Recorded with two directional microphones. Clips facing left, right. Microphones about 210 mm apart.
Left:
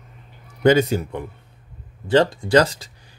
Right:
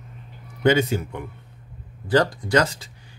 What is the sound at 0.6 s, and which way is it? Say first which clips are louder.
Speech: left 3 dB; 40° left (ahead or behind).